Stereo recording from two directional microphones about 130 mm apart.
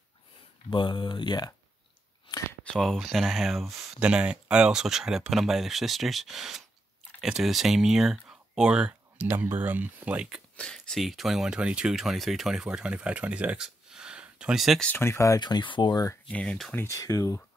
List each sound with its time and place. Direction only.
0.7 s speech: 40° left (ahead or behind)
2.6 s speech: 5° left (ahead or behind)
10.5 s speech: 5° left (ahead or behind)
14.9 s speech: 20° left (ahead or behind)
16.3 s speech: 10° left (ahead or behind)
16.7 s speech: 20° left (ahead or behind)